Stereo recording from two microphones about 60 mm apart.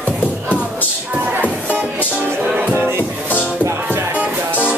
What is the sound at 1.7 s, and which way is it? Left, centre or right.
Music, right.